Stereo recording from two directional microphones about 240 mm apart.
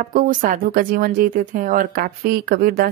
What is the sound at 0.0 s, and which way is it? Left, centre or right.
Speech, right.